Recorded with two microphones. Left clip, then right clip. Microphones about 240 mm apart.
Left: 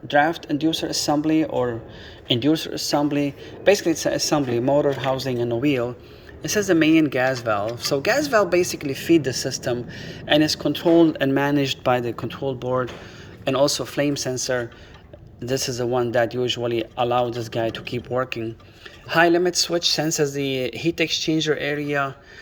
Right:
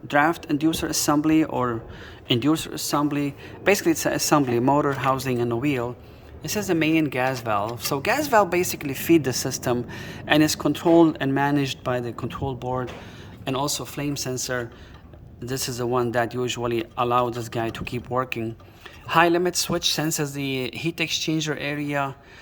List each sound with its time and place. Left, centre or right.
0.1 s speech: centre